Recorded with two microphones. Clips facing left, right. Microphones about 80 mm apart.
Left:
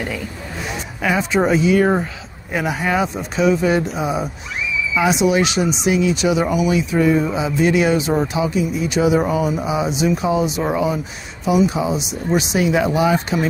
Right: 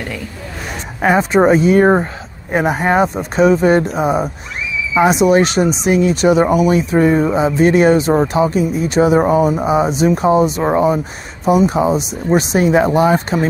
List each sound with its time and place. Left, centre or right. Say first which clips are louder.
1.0 s speech: right 6 dB; right